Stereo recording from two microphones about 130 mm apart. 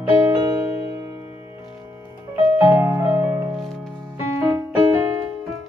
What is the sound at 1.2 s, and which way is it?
Music, 50° left (ahead or behind).